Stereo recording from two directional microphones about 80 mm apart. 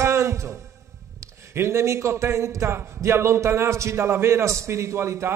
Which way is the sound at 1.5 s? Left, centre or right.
Right.